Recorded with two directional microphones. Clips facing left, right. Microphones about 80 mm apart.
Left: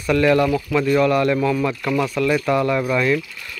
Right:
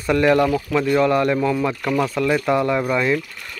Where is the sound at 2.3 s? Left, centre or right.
Centre.